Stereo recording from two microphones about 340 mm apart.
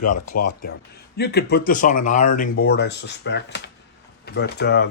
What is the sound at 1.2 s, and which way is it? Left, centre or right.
Speech, left.